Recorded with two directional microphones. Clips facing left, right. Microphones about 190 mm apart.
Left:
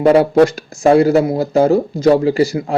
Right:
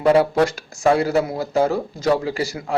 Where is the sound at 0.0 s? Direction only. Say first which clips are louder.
Left 6 dB; 20° left (ahead or behind).